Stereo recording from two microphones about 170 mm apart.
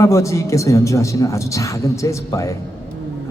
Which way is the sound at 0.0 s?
20° left (ahead or behind).